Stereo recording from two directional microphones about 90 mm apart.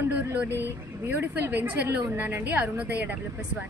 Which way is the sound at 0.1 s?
20° right (ahead or behind).